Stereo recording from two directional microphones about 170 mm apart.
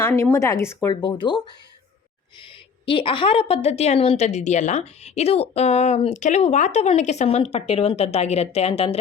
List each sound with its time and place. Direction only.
0.0 s speech: 15° left (ahead or behind)
1.0 s speech: 25° left (ahead or behind)
2.8 s a woman's voice: 30° left (ahead or behind)